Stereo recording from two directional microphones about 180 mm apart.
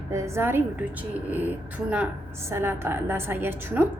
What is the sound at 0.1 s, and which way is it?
Speech, 15° right (ahead or behind).